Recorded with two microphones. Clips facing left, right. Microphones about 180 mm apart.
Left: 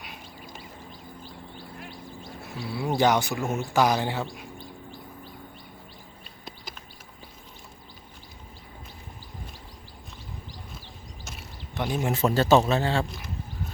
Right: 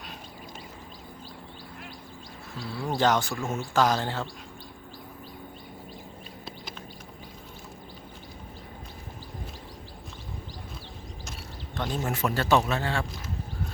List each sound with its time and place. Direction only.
2.6 s speech: 10° left (ahead or behind)
11.8 s speech: 10° left (ahead or behind)
12.1 s speech: 25° left (ahead or behind)